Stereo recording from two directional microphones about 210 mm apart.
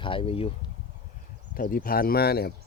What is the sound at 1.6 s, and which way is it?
Speech, 45° left (ahead or behind).